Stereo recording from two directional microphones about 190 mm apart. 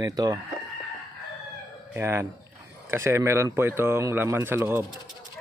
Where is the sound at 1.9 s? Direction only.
15° right (ahead or behind).